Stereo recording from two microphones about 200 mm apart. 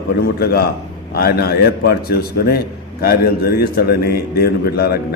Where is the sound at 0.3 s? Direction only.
50° left (ahead or behind).